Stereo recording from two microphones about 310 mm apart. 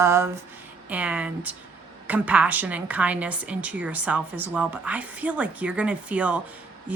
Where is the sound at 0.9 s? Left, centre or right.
Centre.